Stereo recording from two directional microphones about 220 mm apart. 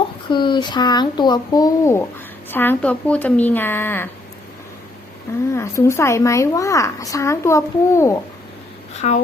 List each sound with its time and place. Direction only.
0.3 s a woman's voice: 20° left (ahead or behind)
5.5 s a woman's voice: 10° left (ahead or behind)
9.0 s speech: 30° left (ahead or behind)